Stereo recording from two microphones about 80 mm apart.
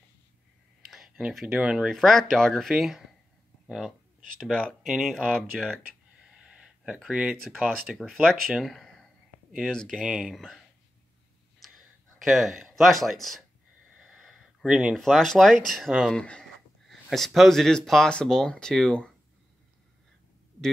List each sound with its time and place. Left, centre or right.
0.8 s speech: centre
1.9 s speech: centre
4.4 s speech: centre
4.8 s speech: centre
5.8 s a sound: centre
8.0 s speech: centre
9.9 s speech: centre
10.3 s speech: centre
11.6 s a sound: centre
15.0 s speech: centre